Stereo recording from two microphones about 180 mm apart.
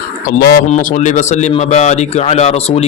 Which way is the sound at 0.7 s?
45° left (ahead or behind).